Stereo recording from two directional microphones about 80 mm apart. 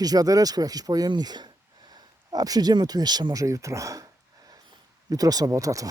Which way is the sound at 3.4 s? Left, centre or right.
Right.